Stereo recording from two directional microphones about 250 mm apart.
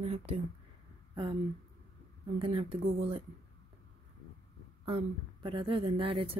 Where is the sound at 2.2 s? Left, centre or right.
Right.